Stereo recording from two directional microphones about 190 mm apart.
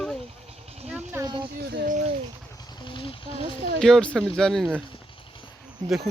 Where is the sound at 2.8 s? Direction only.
25° left (ahead or behind).